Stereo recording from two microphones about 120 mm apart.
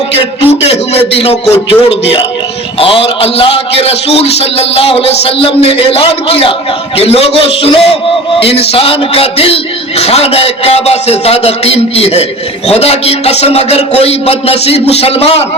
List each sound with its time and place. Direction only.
0.1 s a man's voice: 55° left (ahead or behind)